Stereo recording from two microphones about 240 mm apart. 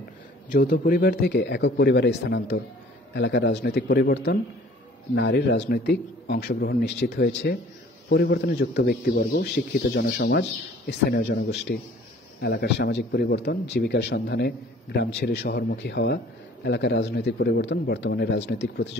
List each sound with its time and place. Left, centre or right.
0.5 s a man's voice: left